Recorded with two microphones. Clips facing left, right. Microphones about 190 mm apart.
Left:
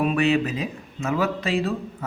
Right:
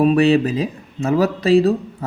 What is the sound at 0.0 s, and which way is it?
Speech, 35° right (ahead or behind).